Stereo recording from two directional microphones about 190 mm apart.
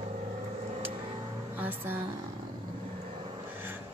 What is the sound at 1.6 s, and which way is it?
Speech, 10° right (ahead or behind).